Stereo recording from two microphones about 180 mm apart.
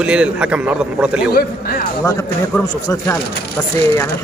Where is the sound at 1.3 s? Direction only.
55° left (ahead or behind).